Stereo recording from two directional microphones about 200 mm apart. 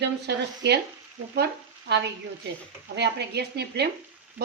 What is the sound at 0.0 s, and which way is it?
Speech, 60° right (ahead or behind).